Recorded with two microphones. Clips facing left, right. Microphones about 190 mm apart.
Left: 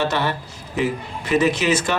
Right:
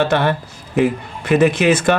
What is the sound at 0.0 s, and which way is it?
Speech, 55° right (ahead or behind).